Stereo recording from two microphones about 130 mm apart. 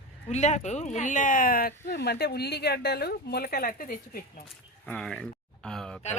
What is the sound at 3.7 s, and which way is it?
Speech, 90° left.